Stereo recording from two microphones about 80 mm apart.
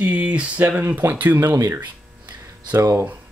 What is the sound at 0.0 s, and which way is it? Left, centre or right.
Speech, centre.